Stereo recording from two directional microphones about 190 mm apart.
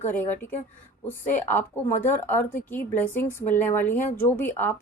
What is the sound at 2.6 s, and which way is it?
A woman's voice, 10° left (ahead or behind).